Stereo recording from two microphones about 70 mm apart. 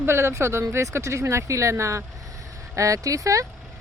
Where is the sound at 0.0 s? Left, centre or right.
Right.